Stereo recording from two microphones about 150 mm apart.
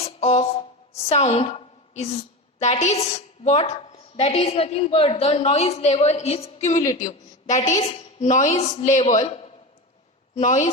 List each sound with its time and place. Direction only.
0.0 s music: 45° left (ahead or behind)
1.0 s a woman's voice: 45° left (ahead or behind)
10.3 s speech: 55° left (ahead or behind)